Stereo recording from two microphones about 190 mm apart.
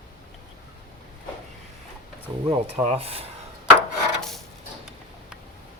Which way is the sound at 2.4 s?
30° right (ahead or behind).